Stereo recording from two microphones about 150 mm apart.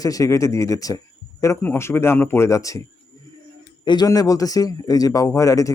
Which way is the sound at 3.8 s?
25° left (ahead or behind).